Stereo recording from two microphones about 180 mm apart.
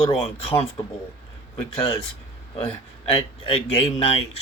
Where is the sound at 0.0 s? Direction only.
35° left (ahead or behind).